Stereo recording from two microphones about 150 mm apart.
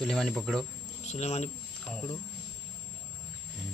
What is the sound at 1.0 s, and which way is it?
Speech, 45° left (ahead or behind).